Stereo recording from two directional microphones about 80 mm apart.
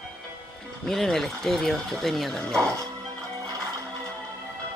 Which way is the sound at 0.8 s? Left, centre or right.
Centre.